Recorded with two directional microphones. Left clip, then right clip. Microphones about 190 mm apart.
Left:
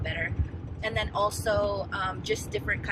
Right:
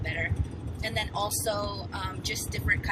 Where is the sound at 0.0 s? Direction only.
15° left (ahead or behind).